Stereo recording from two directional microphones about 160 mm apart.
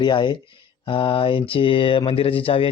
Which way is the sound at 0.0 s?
30° left (ahead or behind).